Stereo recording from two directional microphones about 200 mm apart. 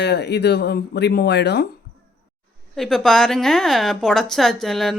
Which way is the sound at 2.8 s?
Centre (ahead or behind).